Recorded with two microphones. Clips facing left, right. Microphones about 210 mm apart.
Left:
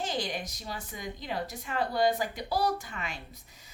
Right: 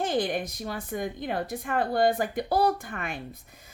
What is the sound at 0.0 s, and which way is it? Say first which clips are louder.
Speech: right 7 dB; 55° right (ahead or behind).